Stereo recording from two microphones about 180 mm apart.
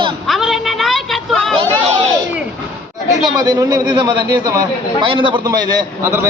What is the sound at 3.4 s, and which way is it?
A man's voice, 20° right (ahead or behind).